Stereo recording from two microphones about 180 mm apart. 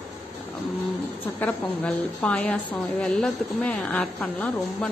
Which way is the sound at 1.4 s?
10° left (ahead or behind).